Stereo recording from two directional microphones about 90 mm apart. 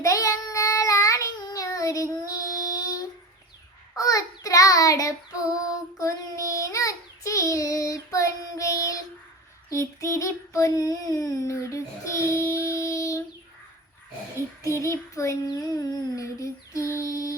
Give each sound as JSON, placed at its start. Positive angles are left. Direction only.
{"t": 0.0, "sound": "child singing", "side_deg": 40}
{"t": 9.6, "sound": "child singing", "side_deg": 35}
{"t": 14.6, "sound": "child singing", "side_deg": 35}